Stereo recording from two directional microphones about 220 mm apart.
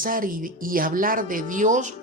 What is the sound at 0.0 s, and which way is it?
Speech, 40° right (ahead or behind).